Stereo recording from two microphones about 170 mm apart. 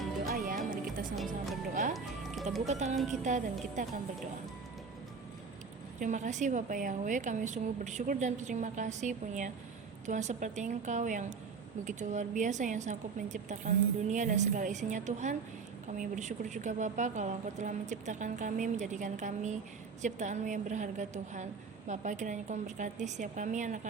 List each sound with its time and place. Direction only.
0.3 s music: 55° right (ahead or behind)
1.1 s music: centre (ahead or behind)
2.6 s a woman's voice: 40° right (ahead or behind)
6.0 s a woman's voice: 45° right (ahead or behind)